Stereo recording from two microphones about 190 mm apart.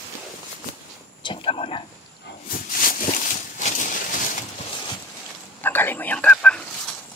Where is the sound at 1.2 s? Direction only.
25° left (ahead or behind).